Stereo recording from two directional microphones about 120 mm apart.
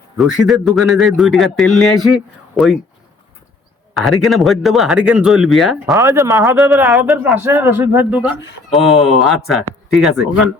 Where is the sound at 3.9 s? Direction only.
Centre (ahead or behind).